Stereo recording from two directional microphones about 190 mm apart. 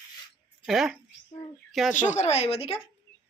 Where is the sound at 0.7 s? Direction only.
Centre (ahead or behind).